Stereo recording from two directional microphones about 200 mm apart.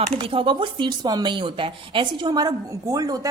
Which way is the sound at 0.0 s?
30° right (ahead or behind).